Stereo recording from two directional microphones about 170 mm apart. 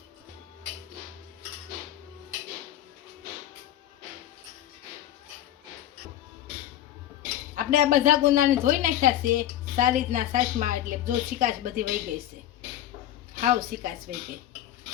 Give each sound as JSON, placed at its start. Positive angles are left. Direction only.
{"t": 7.5, "sound": "a woman's voice", "side_deg": -50}
{"t": 13.3, "sound": "speech", "side_deg": -55}